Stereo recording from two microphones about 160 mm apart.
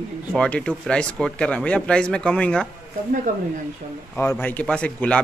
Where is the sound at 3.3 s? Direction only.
50° right (ahead or behind).